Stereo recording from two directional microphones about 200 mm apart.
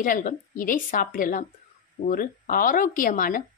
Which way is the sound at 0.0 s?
45° left (ahead or behind).